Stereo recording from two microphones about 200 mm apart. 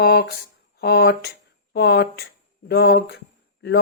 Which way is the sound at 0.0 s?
55° left (ahead or behind).